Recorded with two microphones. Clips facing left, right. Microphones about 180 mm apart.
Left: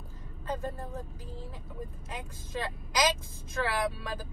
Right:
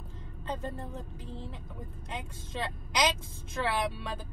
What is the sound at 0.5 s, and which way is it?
Speech, 25° right (ahead or behind).